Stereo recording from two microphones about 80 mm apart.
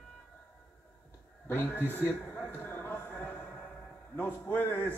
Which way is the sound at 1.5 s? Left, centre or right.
Left.